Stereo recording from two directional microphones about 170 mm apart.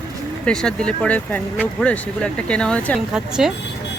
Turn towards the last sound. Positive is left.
turn(degrees=-5)  # may be behind; listen again after turning